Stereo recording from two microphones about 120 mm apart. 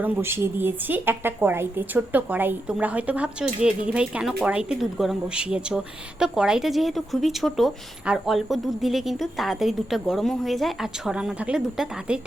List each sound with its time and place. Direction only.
0.0 s a woman's voice: 20° right (ahead or behind)